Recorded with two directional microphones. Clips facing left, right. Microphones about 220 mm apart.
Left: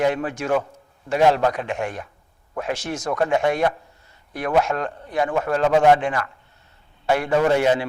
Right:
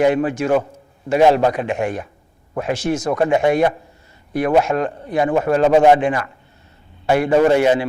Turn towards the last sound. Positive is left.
turn(degrees=-10)  # may be behind; listen again after turning